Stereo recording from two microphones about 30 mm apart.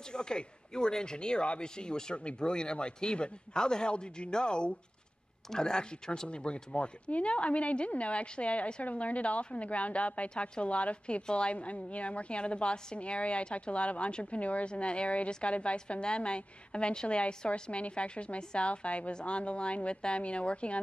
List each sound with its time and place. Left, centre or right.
0.1 s a woman's voice: left
7.1 s a woman's voice: left
10.3 s speech: left
10.6 s a woman's voice: left
14.7 s a woman's voice: left
17.5 s a woman's voice: left